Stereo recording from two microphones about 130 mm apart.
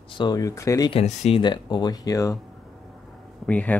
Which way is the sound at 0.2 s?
30° left (ahead or behind).